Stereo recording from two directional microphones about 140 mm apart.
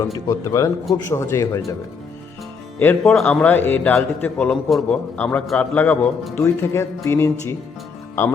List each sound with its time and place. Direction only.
0.0 s speech: 20° left (ahead or behind)
2.8 s a man's voice: 15° left (ahead or behind)
3.2 s a man's voice: 5° left (ahead or behind)